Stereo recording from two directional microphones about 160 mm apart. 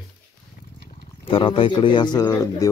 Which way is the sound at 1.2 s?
35° left (ahead or behind).